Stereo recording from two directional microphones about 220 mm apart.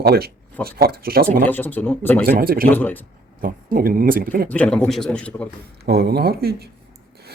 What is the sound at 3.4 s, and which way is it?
Speech, 40° right (ahead or behind).